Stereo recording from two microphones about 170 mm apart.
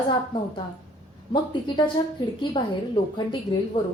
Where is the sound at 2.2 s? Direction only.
25° left (ahead or behind).